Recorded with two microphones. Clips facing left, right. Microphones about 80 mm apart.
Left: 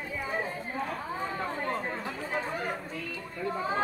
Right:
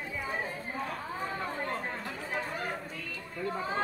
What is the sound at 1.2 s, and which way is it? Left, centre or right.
Chatter, centre.